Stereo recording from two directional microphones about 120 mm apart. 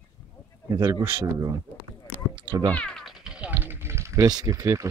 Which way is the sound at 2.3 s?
40° right (ahead or behind).